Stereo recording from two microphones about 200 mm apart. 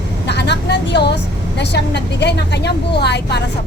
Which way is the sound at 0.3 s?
55° left (ahead or behind).